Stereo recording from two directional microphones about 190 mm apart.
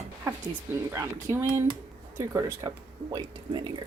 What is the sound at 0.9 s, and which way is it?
A woman's voice, 15° right (ahead or behind).